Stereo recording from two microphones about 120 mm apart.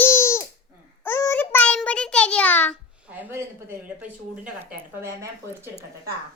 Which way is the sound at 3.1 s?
15° right (ahead or behind).